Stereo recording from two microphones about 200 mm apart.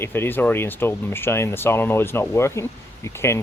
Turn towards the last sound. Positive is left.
turn(degrees=15)  # may be behind; listen again after turning